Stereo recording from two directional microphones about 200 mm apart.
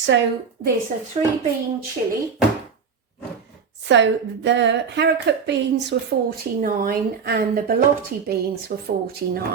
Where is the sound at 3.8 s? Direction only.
60° right (ahead or behind).